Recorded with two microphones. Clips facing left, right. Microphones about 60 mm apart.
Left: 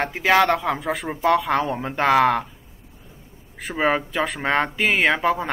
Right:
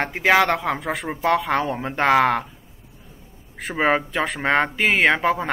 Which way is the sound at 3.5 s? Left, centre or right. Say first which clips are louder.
Right 1 dB; centre.